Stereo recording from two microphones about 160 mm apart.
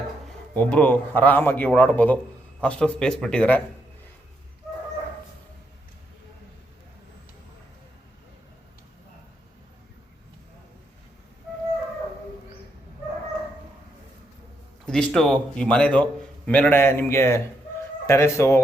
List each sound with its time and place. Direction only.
0.5 s a man's voice: 10° left (ahead or behind)
14.8 s a man's voice: 5° left (ahead or behind)